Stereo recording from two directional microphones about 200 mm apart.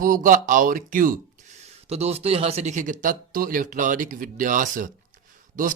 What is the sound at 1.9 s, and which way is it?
Speech, 30° right (ahead or behind).